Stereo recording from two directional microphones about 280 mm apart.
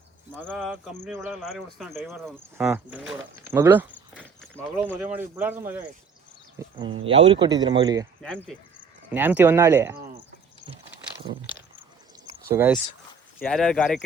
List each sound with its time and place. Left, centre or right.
0.3 s speech: centre
4.2 s walk: centre
4.8 s speech: centre
7.0 s speech: centre
8.2 s speech: centre
11.8 s a sound: centre
13.4 s speech: centre